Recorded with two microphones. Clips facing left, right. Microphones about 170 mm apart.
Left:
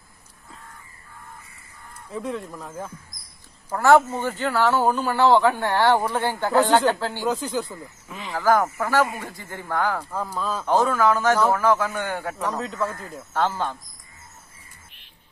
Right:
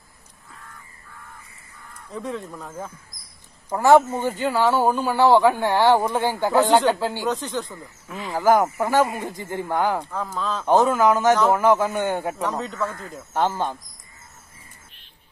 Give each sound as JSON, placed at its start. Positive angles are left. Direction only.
{"t": 2.0, "sound": "speech", "side_deg": 0}
{"t": 3.7, "sound": "speech", "side_deg": -15}
{"t": 7.2, "sound": "speech", "side_deg": 5}
{"t": 8.3, "sound": "speech", "side_deg": -20}
{"t": 10.1, "sound": "speech", "side_deg": 10}
{"t": 10.6, "sound": "speech", "side_deg": -20}
{"t": 12.4, "sound": "speech", "side_deg": 0}
{"t": 13.3, "sound": "speech", "side_deg": -15}